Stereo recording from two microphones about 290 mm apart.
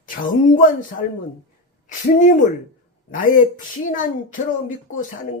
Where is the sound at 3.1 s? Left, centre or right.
Left.